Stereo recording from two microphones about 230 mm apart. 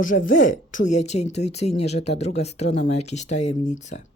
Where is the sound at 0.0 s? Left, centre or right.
Left.